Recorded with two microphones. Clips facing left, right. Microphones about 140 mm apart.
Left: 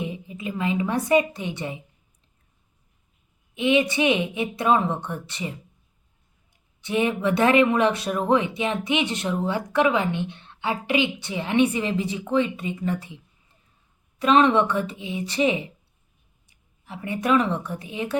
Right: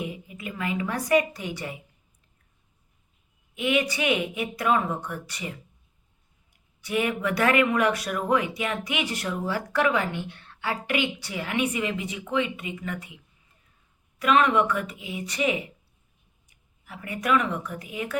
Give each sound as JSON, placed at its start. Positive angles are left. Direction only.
{"t": 0.0, "sound": "a woman's voice", "side_deg": 25}
{"t": 3.5, "sound": "speech", "side_deg": 25}
{"t": 6.8, "sound": "speech", "side_deg": 25}
{"t": 14.2, "sound": "a woman's voice", "side_deg": 30}